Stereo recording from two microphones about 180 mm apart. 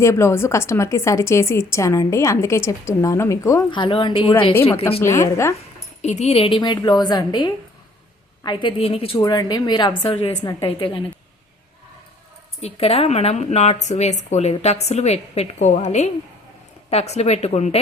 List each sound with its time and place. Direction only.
0.0 s a woman's voice: 15° left (ahead or behind)
3.7 s a woman's voice: 30° left (ahead or behind)
4.9 s a woman's voice: 15° left (ahead or behind)
6.0 s a woman's voice: 40° left (ahead or behind)
9.1 s a woman's voice: 20° left (ahead or behind)
12.6 s speech: 30° left (ahead or behind)